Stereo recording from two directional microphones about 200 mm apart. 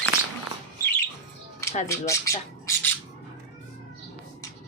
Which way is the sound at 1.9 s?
15° left (ahead or behind).